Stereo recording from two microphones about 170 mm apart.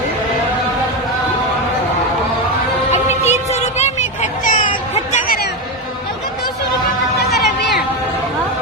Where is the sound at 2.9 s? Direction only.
40° left (ahead or behind).